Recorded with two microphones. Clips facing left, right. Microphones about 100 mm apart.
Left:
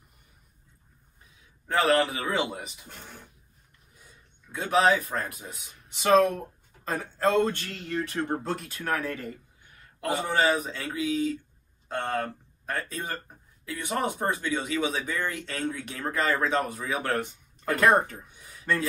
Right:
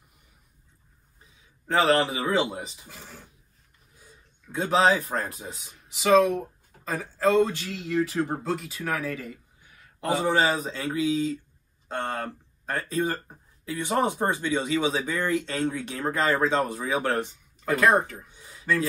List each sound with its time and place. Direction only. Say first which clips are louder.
1.7 s speech: right 1 dB; 25° right (ahead or behind)
2.9 s speech: even; 5° right (ahead or behind)
4.6 s speech: right 1 dB; 25° right (ahead or behind)
5.9 s speech: right 1 dB; 5° right (ahead or behind)
9.9 s speech: right 3 dB; 20° right (ahead or behind)
17.8 s speech: even; centre (ahead or behind)